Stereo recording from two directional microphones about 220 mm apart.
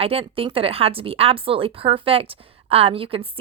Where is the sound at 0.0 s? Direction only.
25° right (ahead or behind).